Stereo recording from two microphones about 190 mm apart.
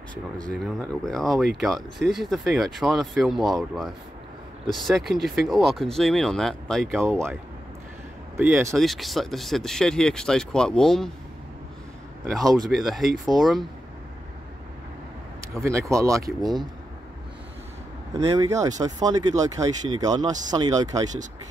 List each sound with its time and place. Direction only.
0.5 s speech: 5° left (ahead or behind)
7.0 s speech: 15° right (ahead or behind)
8.4 s speech: 10° right (ahead or behind)
8.7 s speech: centre (ahead or behind)
12.4 s speech: 20° right (ahead or behind)
12.6 s speech: centre (ahead or behind)
15.5 s speech: 15° right (ahead or behind)
18.1 s speech: 15° right (ahead or behind)